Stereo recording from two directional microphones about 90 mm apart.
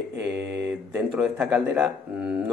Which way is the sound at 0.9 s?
15° right (ahead or behind).